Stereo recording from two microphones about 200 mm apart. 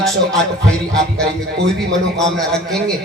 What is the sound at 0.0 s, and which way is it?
A man's voice, centre (ahead or behind).